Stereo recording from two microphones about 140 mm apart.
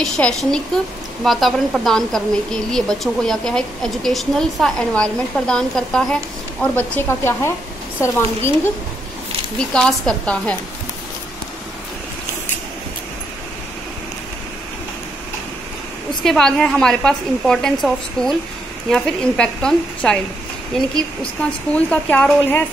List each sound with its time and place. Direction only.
0.0 s a woman's voice: 5° left (ahead or behind); by 8.5 s 20° left (ahead or behind)
9.8 s speech: 5° left (ahead or behind)
16.2 s a woman's voice: 5° left (ahead or behind)